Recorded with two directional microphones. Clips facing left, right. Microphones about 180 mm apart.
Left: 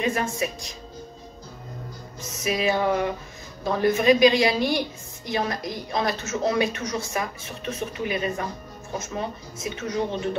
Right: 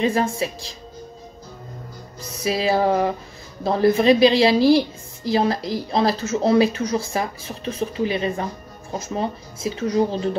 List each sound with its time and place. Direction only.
0.0 s a woman's voice: 30° right (ahead or behind)
2.3 s a woman's voice: 30° right (ahead or behind)